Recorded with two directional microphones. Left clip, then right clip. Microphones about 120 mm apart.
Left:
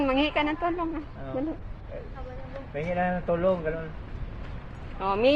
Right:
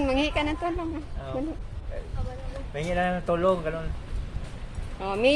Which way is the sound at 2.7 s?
40° right (ahead or behind).